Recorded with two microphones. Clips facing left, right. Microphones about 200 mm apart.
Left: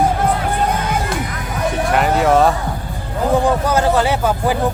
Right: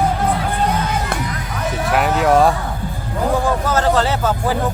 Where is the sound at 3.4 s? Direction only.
15° left (ahead or behind).